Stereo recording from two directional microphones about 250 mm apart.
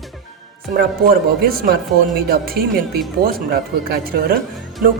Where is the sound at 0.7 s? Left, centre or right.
Right.